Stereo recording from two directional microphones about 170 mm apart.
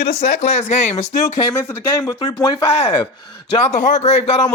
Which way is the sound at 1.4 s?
15° left (ahead or behind).